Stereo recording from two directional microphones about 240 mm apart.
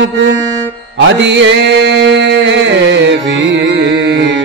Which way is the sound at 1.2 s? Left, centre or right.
Right.